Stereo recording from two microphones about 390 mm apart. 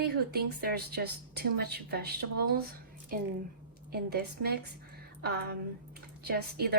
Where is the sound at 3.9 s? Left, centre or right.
Right.